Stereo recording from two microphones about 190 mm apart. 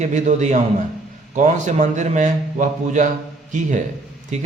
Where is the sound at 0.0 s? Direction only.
40° right (ahead or behind).